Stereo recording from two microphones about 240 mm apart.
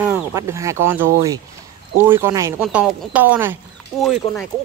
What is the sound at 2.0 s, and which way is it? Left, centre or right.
Speech, centre.